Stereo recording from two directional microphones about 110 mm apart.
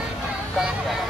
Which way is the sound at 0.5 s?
5° right (ahead or behind).